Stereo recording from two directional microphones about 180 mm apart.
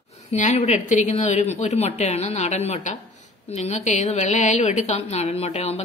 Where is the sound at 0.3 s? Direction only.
40° left (ahead or behind).